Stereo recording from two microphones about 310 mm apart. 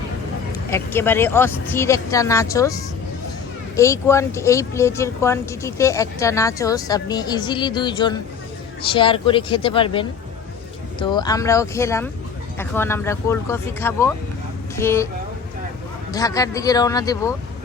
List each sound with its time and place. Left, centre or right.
0.7 s speech: centre
3.8 s speech: centre
16.1 s speech: centre